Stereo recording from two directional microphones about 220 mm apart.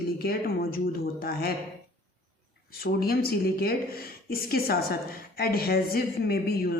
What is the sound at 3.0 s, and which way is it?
Speech, 45° left (ahead or behind).